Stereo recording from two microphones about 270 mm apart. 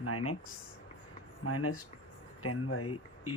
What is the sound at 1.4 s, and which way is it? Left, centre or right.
Speech, left.